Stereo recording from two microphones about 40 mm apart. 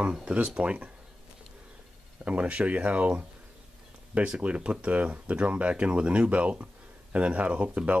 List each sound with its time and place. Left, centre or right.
0.0 s speech: right
2.2 s speech: right
4.3 s speech: right